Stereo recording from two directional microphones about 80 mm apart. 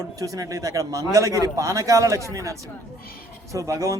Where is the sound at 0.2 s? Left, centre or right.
Right.